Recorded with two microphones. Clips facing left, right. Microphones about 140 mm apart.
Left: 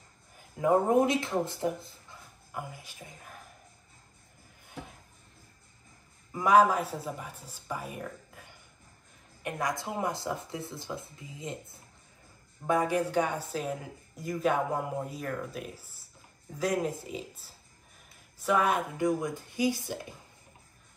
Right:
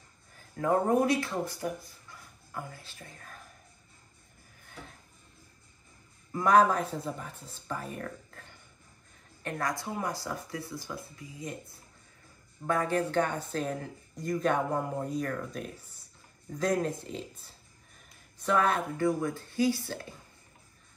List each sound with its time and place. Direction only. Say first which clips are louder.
0.4 s speech: left 2 dB; 15° left (ahead or behind)
6.3 s speech: left 1 dB; 10° left (ahead or behind)